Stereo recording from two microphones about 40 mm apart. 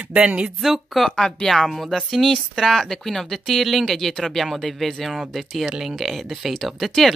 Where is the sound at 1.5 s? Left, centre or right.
Centre.